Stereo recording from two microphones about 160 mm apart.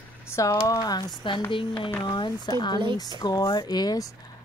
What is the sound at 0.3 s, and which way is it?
Speech, 20° left (ahead or behind).